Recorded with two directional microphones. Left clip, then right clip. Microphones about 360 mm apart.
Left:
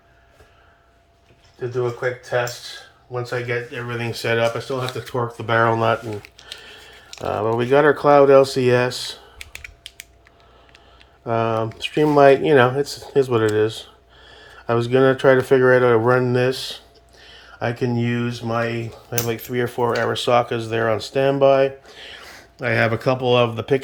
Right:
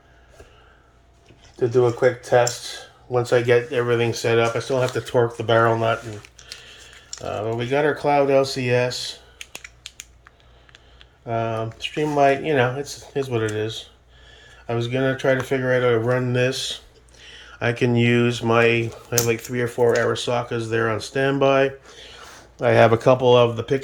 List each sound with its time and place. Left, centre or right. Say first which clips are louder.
1.5 s speech: right 5 dB; right; by 6.0 s centre
7.3 s speech: left 5 dB; centre
11.3 s speech: left 4 dB; centre
17.2 s a sound: left 1 dB; centre
17.7 s speech: right 4 dB; centre